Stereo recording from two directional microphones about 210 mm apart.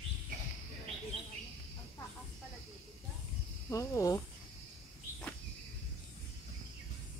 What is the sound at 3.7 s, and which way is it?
Speech, 15° left (ahead or behind).